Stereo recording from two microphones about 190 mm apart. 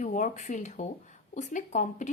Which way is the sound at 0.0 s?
40° left (ahead or behind).